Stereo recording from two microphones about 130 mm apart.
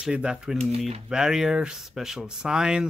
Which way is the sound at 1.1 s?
5° right (ahead or behind).